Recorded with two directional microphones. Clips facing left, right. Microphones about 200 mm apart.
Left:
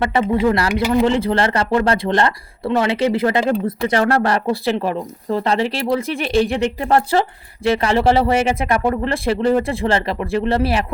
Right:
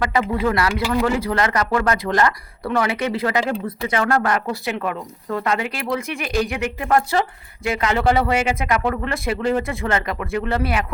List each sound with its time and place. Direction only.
0.0 s speech: 25° left (ahead or behind)